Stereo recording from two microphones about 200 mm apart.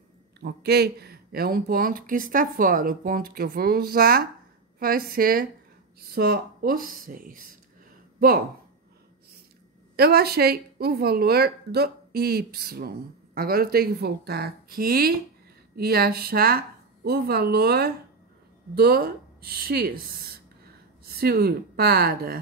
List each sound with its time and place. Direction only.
0.4 s a woman's voice: 55° right (ahead or behind)
9.9 s a woman's voice: 50° right (ahead or behind)
21.0 s a woman's voice: 50° right (ahead or behind)